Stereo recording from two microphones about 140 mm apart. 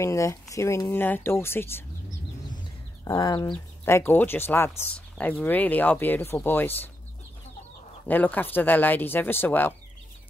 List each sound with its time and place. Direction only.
0.0 s speech: 20° left (ahead or behind)
3.2 s speech: 35° left (ahead or behind)
3.5 s speech: 15° left (ahead or behind)
8.1 s speech: 15° left (ahead or behind)